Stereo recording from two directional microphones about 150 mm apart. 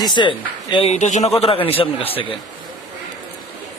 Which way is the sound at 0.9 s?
55° left (ahead or behind).